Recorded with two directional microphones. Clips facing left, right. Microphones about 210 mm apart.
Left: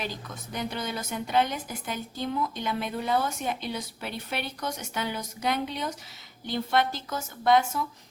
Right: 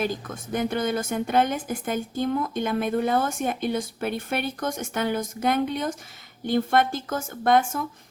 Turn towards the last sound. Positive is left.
turn(degrees=-50)  # may be behind; listen again after turning